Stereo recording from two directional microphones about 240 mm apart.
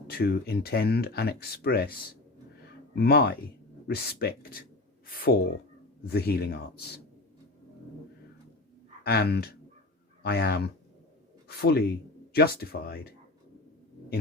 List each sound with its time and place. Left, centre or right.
0.1 s speech: left
9.0 s speech: left